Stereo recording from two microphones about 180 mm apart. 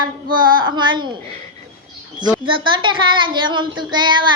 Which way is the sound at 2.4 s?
30° right (ahead or behind).